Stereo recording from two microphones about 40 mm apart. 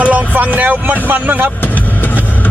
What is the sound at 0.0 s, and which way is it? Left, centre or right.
Vehicle, right.